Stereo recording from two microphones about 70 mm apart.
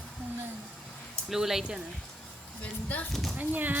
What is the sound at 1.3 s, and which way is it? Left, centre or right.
Speech, centre.